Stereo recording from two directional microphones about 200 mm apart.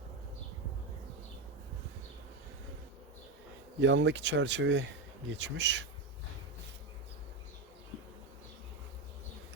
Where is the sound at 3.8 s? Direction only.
65° right (ahead or behind).